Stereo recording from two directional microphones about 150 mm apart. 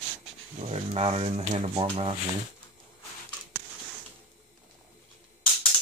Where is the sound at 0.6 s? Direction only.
40° right (ahead or behind).